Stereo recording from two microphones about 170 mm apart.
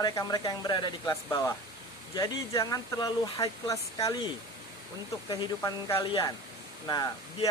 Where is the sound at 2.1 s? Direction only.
20° left (ahead or behind).